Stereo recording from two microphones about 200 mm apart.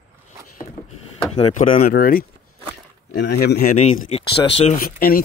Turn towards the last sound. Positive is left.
turn(degrees=45)  # may be behind; listen again after turning